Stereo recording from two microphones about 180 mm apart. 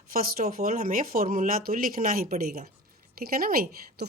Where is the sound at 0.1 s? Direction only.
55° right (ahead or behind).